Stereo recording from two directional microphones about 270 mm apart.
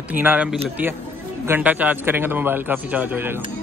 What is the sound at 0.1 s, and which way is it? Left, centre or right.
Speech, centre.